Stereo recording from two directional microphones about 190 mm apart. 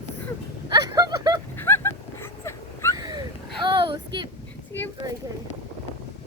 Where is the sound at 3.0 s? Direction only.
25° right (ahead or behind).